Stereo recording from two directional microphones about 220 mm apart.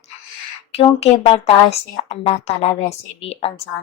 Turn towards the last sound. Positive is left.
turn(degrees=25)  # may be behind; listen again after turning